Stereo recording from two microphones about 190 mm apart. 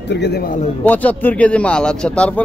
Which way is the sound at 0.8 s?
10° left (ahead or behind).